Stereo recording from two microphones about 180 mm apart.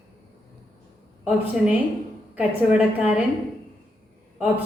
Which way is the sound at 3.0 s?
5° right (ahead or behind).